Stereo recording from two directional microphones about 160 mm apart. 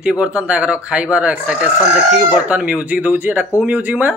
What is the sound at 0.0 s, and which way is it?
Speech, 5° right (ahead or behind).